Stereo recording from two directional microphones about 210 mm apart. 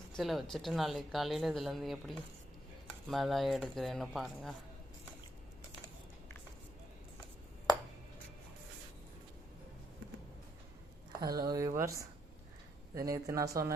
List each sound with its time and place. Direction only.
0.2 s speech: centre (ahead or behind)
11.2 s speech: 20° right (ahead or behind)